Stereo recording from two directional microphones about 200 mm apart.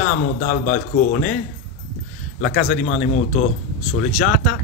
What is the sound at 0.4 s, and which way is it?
Speech, 40° left (ahead or behind).